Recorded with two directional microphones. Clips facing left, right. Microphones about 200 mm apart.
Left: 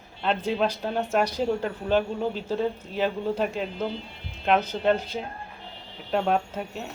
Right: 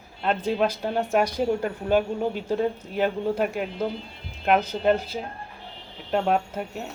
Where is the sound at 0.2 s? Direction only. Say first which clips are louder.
Right 1 dB; 5° right (ahead or behind).